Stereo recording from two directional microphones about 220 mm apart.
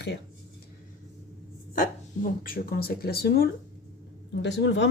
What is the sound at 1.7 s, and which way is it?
Speech, 40° left (ahead or behind).